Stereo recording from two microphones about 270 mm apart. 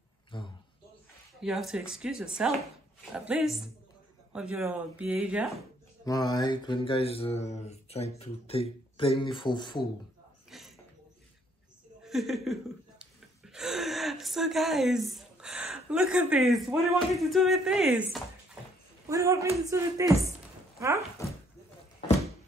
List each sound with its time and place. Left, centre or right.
0.3 s a sound: centre
1.4 s speech: centre
6.0 s mantra: centre
10.5 s speech: centre
12.0 s speech: centre
19.0 s speech: centre